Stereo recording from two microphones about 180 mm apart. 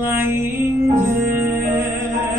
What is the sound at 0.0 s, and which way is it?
Music, 10° right (ahead or behind).